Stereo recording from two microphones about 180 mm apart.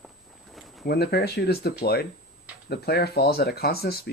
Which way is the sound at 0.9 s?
60° left (ahead or behind).